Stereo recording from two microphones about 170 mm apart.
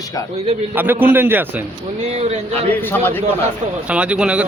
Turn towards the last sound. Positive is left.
turn(degrees=-5)  # may be behind; listen again after turning